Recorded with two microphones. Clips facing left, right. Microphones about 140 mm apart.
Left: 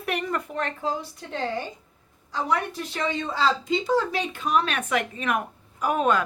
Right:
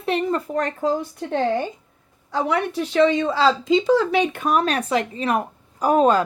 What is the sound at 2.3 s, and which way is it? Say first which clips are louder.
Speech: right 5 dB; 75° right (ahead or behind).